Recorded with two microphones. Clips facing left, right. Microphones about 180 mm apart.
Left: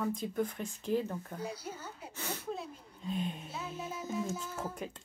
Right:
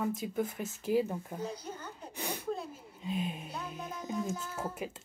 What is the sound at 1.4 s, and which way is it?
Speech, 10° left (ahead or behind).